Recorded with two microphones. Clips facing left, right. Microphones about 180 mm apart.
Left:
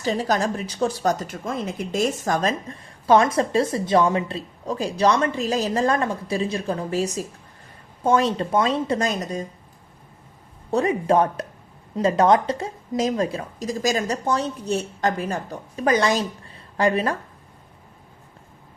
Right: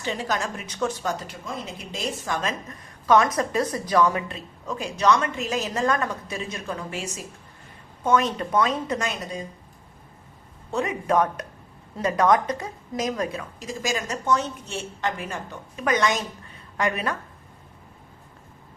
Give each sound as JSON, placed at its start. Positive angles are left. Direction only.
{"t": 0.0, "sound": "a woman's voice", "side_deg": 40}
{"t": 10.7, "sound": "a woman's voice", "side_deg": 35}